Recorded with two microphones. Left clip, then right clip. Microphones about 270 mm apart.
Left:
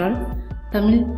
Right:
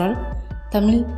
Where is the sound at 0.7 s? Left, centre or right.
Centre.